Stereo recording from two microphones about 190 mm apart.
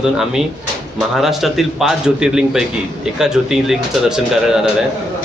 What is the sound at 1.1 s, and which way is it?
A man's voice, centre (ahead or behind).